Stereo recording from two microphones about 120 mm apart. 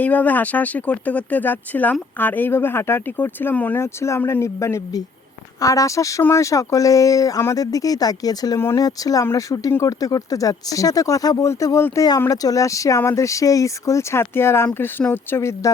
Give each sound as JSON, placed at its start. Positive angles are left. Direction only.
{"t": 0.0, "sound": "speech", "side_deg": 15}